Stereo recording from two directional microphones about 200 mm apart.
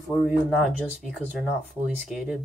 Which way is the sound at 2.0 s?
5° right (ahead or behind).